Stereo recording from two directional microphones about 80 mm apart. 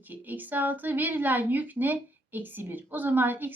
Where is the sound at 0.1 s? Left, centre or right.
Right.